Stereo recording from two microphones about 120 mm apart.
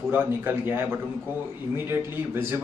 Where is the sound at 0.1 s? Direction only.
15° right (ahead or behind).